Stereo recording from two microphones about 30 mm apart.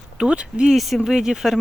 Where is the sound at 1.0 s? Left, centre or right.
Centre.